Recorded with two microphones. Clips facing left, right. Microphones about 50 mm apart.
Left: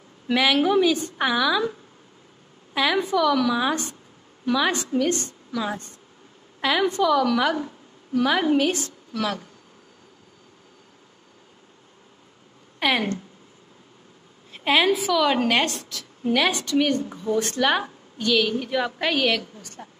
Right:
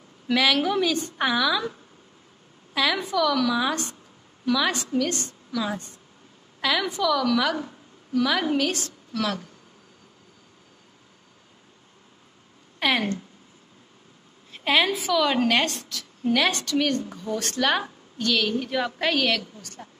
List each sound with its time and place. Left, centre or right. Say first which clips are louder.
0.3 s a woman's voice: left 2 dB; centre
6.6 s a woman's voice: left 3 dB; centre
12.7 s speech: left 1 dB; centre
14.5 s a woman's voice: left 2 dB; centre